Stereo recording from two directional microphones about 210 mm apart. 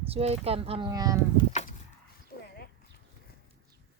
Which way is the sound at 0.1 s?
30° right (ahead or behind).